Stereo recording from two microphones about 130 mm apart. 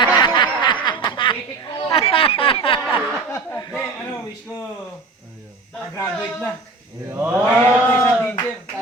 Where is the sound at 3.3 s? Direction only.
15° left (ahead or behind).